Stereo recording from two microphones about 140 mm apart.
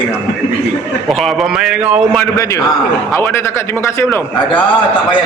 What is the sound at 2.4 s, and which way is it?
A man's voice, 20° left (ahead or behind).